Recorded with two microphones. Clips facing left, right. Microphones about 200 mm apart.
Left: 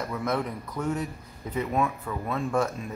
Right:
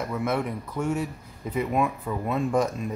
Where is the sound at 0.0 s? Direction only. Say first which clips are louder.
Right 2 dB; 5° right (ahead or behind).